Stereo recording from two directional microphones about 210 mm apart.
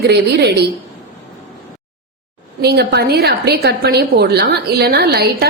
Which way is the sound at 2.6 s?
50° right (ahead or behind).